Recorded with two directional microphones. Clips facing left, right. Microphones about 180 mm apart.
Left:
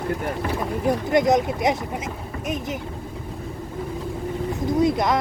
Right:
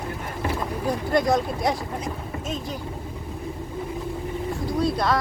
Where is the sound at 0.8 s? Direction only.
20° left (ahead or behind).